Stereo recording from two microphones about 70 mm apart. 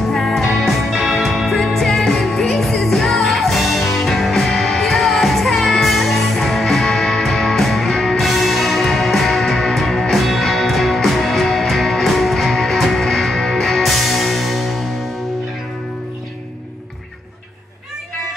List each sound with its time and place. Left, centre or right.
0.1 s music: centre